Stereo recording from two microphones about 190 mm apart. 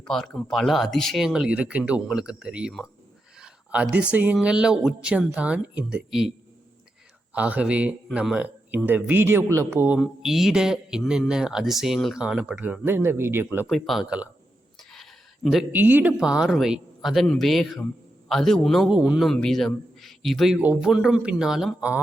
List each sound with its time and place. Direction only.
0.0 s a man's voice: 5° left (ahead or behind)
7.3 s speech: 5° right (ahead or behind)
13.7 s a man's voice: centre (ahead or behind)
14.8 s a sound: centre (ahead or behind)
15.4 s a man's voice: 5° right (ahead or behind)